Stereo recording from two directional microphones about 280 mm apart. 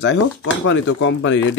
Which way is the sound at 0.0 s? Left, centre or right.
Left.